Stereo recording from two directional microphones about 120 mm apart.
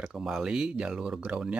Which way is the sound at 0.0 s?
5° right (ahead or behind).